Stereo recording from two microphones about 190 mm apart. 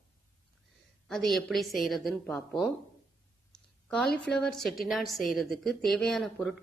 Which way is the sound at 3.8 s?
5° left (ahead or behind).